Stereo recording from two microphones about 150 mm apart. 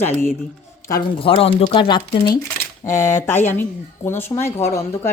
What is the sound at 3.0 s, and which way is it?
Speech, 15° left (ahead or behind).